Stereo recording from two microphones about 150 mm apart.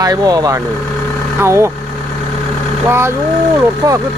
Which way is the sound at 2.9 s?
15° right (ahead or behind).